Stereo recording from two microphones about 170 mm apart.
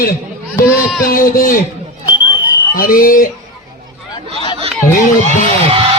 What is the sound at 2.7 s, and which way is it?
Speech, 55° left (ahead or behind).